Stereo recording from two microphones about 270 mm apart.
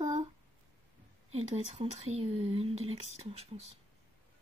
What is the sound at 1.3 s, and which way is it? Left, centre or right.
Speech, right.